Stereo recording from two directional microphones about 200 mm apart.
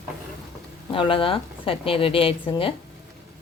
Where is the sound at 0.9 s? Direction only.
25° left (ahead or behind).